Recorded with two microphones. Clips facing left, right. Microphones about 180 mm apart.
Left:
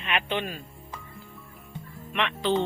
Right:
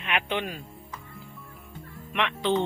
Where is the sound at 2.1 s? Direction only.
15° right (ahead or behind).